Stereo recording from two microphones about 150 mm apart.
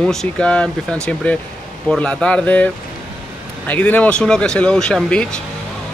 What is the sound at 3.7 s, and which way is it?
Speech, 10° left (ahead or behind).